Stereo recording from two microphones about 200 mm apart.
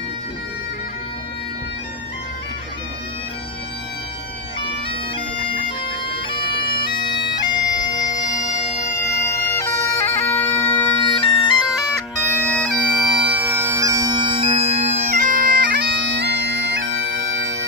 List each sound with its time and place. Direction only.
6.0 s bagpipes: 25° left (ahead or behind)
8.9 s bagpipes: 15° left (ahead or behind)
11.0 s bagpipes: 25° left (ahead or behind)
12.3 s bagpipes: 10° left (ahead or behind); by 17.6 s 80° right